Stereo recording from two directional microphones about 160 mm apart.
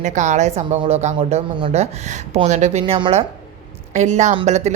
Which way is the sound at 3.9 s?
45° right (ahead or behind).